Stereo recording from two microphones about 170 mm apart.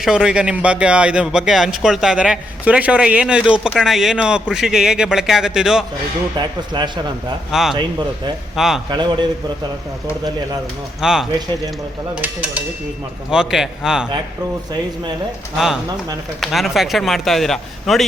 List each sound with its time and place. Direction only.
0.0 s speech: 5° right (ahead or behind)
6.3 s speech: 25° right (ahead or behind)
7.5 s speech: centre (ahead or behind)
8.9 s speech: 25° right (ahead or behind)
11.0 s speech: 5° right (ahead or behind)
12.2 s dishes: 10° right (ahead or behind)
13.3 s speech: 5° right (ahead or behind)
15.5 s speech: centre (ahead or behind)